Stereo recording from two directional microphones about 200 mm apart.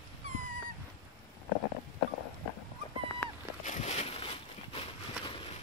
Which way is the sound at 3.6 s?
35° left (ahead or behind).